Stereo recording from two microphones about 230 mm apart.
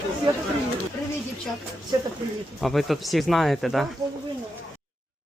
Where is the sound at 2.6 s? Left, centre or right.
Centre.